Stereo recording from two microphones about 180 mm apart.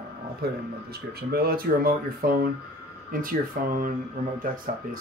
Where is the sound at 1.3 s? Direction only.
55° right (ahead or behind).